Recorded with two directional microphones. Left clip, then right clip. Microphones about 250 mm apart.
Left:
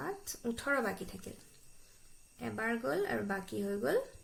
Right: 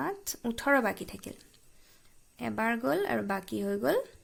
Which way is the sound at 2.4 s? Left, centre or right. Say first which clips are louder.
Right 6 dB; right.